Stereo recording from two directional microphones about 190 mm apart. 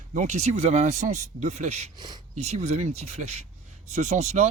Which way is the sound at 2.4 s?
35° right (ahead or behind).